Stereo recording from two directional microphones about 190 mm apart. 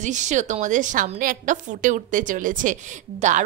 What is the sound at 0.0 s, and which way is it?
A woman's voice, 40° right (ahead or behind).